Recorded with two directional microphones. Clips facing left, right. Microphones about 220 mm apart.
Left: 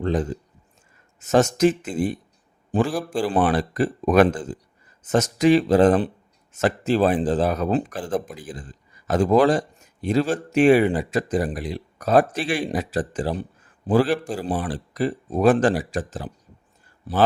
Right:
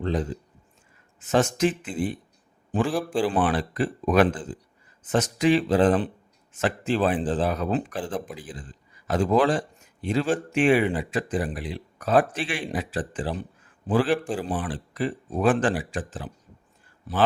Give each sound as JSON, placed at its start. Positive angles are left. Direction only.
{"t": 0.0, "sound": "a man's voice", "side_deg": 50}